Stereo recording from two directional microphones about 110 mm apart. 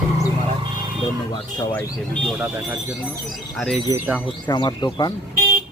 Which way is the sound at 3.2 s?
Centre (ahead or behind).